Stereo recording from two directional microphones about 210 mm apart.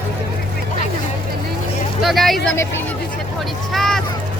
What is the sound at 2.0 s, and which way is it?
Speech, centre (ahead or behind).